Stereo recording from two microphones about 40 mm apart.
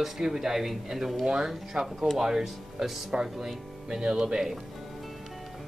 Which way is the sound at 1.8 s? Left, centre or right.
Centre.